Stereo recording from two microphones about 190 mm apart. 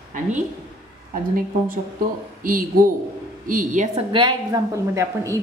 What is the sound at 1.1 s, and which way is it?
A woman's voice, 45° right (ahead or behind).